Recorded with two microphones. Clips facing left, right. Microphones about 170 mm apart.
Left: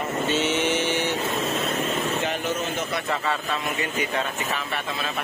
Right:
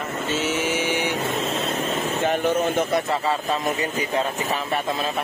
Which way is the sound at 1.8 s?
50° right (ahead or behind).